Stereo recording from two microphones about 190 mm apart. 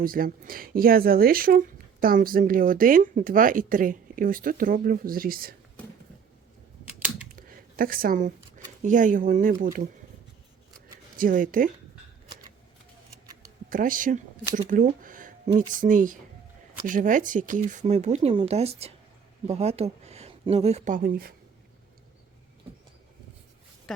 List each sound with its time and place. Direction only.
0.0 s speech: 50° right (ahead or behind)
7.3 s speech: 50° right (ahead or behind)
11.2 s speech: 45° right (ahead or behind)
13.7 s speech: 45° right (ahead or behind)